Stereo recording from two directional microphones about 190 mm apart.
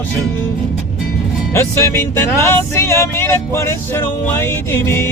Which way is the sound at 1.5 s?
15° left (ahead or behind).